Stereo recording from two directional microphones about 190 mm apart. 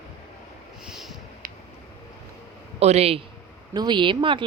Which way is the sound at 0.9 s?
Centre (ahead or behind).